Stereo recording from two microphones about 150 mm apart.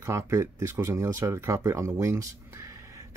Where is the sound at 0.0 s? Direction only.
20° right (ahead or behind).